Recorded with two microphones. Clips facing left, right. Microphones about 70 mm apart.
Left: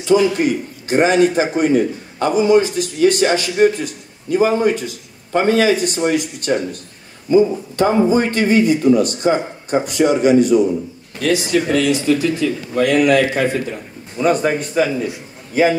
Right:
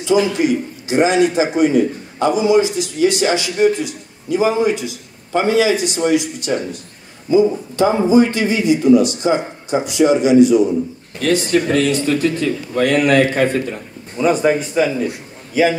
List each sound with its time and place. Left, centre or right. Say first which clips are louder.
0.0 s a man's voice: left 1 dB; left
11.1 s speech: right 1 dB; right
14.2 s a man's voice: right 1 dB; centre